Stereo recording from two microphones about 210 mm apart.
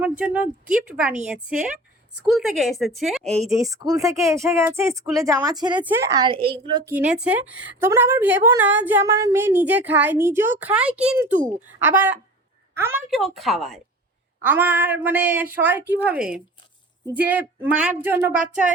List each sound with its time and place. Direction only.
0.0 s a woman's voice: 10° right (ahead or behind)
3.5 s a woman's voice: 15° right (ahead or behind)
6.9 s a woman's voice: 5° right (ahead or behind)
13.1 s a woman's voice: centre (ahead or behind)